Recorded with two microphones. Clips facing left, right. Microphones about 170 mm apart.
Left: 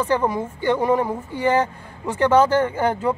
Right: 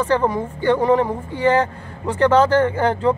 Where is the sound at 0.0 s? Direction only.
10° left (ahead or behind).